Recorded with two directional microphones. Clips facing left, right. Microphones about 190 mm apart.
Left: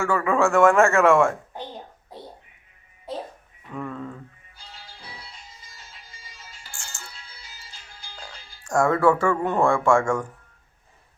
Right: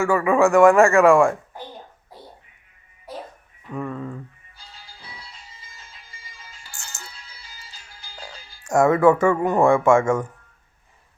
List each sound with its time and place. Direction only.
0.0 s speech: 15° right (ahead or behind)
1.5 s hands: 20° left (ahead or behind)
3.7 s speech: 10° right (ahead or behind)
6.7 s music: 20° right (ahead or behind)
8.6 s speech: 20° right (ahead or behind)